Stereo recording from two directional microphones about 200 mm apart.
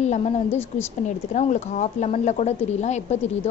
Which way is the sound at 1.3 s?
35° left (ahead or behind).